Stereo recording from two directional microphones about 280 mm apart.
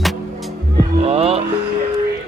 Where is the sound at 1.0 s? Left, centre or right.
Right.